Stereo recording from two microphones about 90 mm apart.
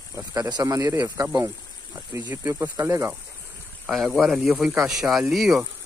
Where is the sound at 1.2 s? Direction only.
20° right (ahead or behind).